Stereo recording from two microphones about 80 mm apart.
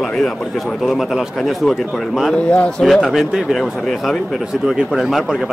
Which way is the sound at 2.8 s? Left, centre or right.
Centre.